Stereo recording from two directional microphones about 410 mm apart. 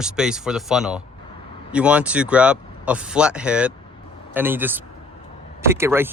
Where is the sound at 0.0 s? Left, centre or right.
Centre.